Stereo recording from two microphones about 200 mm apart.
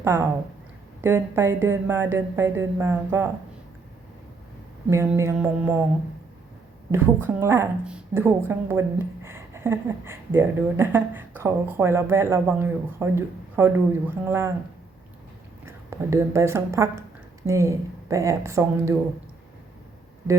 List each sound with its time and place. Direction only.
0.0 s speech: 10° right (ahead or behind)
4.9 s speech: 15° right (ahead or behind)
6.9 s speech: 10° right (ahead or behind)
15.6 s speech: 15° right (ahead or behind)